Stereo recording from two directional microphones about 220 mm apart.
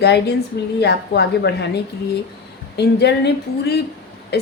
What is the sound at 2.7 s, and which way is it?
A woman's voice, 50° left (ahead or behind).